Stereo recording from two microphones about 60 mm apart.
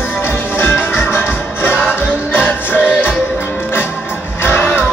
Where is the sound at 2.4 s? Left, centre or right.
Left.